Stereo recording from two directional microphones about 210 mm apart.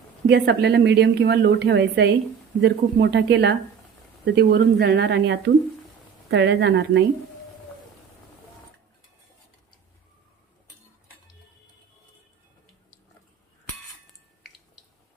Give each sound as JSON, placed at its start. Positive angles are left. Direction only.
{"t": 0.3, "sound": "a woman's voice", "side_deg": -50}